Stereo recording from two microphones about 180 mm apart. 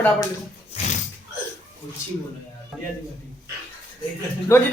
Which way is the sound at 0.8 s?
35° left (ahead or behind).